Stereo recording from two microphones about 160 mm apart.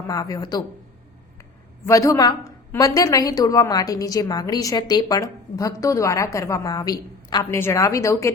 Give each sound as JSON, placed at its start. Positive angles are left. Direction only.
{"t": 0.1, "sound": "a woman's voice", "side_deg": 20}
{"t": 1.9, "sound": "a woman's voice", "side_deg": 20}